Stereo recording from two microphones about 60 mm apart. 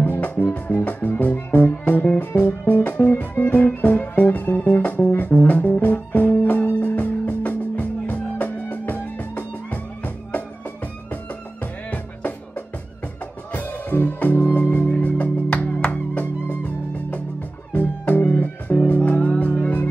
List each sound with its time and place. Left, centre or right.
0.0 s music: left
11.6 s music: left